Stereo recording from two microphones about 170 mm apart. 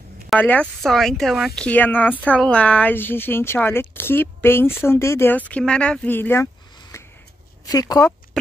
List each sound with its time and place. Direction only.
0.4 s speech: 10° left (ahead or behind)